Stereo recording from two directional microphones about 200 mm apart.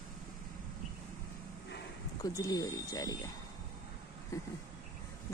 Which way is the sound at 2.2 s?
20° left (ahead or behind).